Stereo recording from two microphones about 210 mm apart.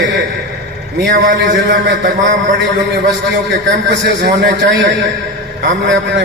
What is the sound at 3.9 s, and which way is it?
Music, 55° right (ahead or behind).